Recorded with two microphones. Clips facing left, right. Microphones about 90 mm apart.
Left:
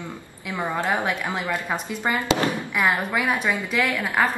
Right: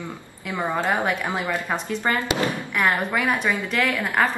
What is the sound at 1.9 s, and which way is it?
Speech, 15° left (ahead or behind).